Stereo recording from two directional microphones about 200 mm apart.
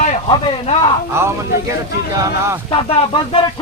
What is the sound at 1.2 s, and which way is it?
Speech, 15° right (ahead or behind).